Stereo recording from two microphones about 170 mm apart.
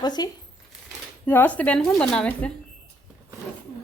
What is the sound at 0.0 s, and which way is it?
Speech, 25° left (ahead or behind).